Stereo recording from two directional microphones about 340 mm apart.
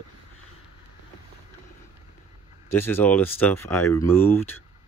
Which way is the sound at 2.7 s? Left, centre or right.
Centre.